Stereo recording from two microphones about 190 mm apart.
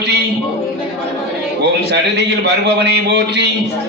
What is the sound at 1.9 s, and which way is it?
A man's voice, 65° right (ahead or behind).